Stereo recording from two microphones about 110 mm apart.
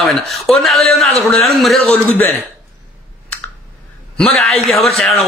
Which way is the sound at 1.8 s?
15° left (ahead or behind).